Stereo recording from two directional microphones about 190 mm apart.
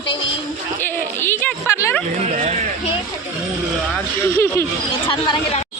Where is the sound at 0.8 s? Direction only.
10° left (ahead or behind).